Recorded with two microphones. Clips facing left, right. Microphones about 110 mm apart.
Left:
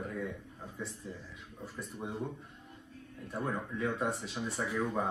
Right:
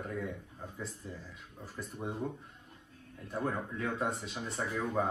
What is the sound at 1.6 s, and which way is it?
Speech, centre (ahead or behind).